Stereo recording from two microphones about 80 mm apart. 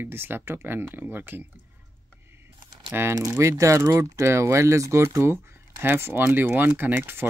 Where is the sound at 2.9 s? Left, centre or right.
Right.